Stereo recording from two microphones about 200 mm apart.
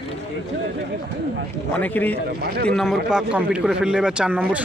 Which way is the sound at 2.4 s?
55° right (ahead or behind).